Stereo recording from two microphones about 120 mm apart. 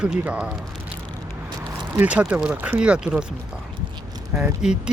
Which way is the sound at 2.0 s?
10° right (ahead or behind).